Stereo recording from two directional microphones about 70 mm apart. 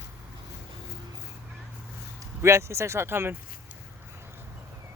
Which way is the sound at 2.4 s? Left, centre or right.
Right.